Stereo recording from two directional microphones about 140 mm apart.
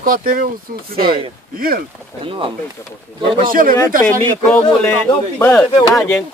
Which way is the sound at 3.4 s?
80° right.